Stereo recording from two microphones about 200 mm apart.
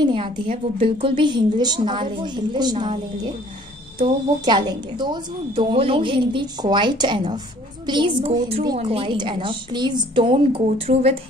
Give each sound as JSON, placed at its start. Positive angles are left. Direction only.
{"t": 0.0, "sound": "a sound", "side_deg": -25}
{"t": 0.5, "sound": "a woman's voice", "side_deg": -30}
{"t": 4.0, "sound": "a woman's voice", "side_deg": -25}